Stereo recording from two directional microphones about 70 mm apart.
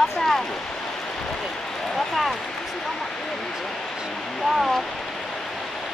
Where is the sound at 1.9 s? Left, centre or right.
Centre.